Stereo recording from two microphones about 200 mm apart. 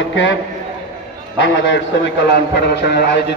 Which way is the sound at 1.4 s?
65° left (ahead or behind).